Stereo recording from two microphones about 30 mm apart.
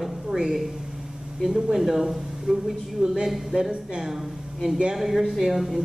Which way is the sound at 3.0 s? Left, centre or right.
Right.